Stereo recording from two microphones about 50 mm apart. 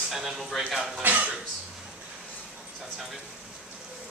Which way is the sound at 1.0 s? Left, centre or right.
Right.